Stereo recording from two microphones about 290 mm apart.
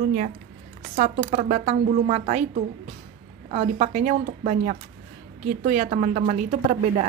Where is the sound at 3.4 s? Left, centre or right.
Right.